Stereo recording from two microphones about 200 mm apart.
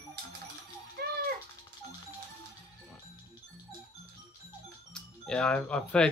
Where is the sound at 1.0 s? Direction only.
50° right (ahead or behind).